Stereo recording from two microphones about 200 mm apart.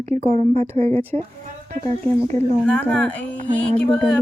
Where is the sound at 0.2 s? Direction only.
30° right (ahead or behind).